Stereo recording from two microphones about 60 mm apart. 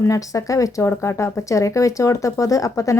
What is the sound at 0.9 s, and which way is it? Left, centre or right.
Speech, left.